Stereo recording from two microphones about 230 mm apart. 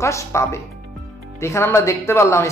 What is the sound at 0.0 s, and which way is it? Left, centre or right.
A man's voice, centre.